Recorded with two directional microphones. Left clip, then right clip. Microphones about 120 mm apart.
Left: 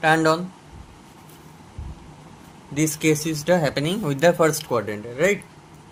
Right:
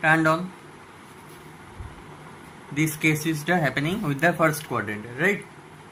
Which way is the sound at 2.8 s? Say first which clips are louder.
Left 2 dB; 90° left.